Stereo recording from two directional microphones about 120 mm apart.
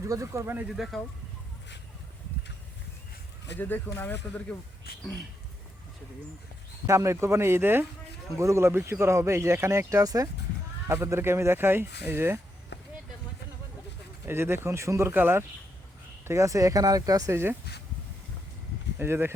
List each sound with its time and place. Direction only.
0.0 s speech: 25° right (ahead or behind)
0.8 s speech: centre (ahead or behind)
3.6 s speech: 15° left (ahead or behind)
6.8 s speech: 25° right (ahead or behind)
14.3 s speech: 20° right (ahead or behind)
18.9 s speech: 20° right (ahead or behind)